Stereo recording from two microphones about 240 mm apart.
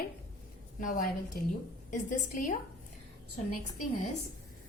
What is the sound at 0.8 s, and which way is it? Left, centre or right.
A woman's voice, left.